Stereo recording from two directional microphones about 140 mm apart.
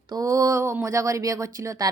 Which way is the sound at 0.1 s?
25° right (ahead or behind).